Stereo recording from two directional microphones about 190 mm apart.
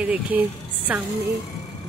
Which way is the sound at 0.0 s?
10° right (ahead or behind).